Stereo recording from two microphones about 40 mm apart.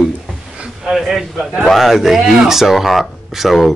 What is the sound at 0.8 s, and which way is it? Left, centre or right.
A man's voice, centre.